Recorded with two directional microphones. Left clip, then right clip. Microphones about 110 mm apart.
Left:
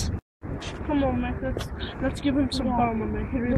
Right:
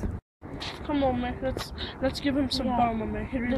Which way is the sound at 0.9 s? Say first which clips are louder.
Left 1 dB; 35° right (ahead or behind).